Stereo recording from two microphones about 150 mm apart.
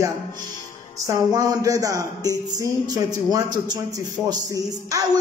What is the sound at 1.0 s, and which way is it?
A man's voice, 20° right (ahead or behind).